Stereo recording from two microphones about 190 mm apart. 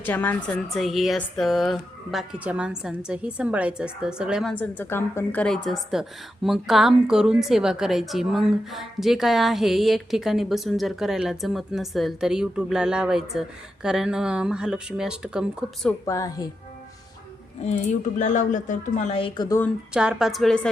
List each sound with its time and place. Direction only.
0.0 s speech: 10° left (ahead or behind)
15.9 s a woman's voice: 15° left (ahead or behind)
18.2 s speech: 40° left (ahead or behind); by 19.6 s 20° left (ahead or behind)
19.9 s speech: 5° right (ahead or behind)